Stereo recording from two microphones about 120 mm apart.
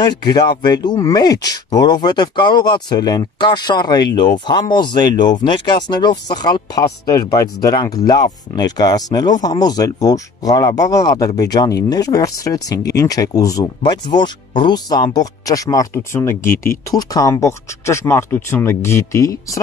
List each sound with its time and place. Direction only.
0.4 s speech: 35° left (ahead or behind)